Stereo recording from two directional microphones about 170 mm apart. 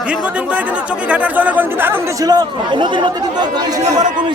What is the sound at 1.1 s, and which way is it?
Speech, 10° right (ahead or behind).